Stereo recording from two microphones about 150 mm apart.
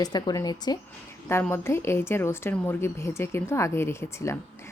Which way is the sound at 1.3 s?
15° left (ahead or behind).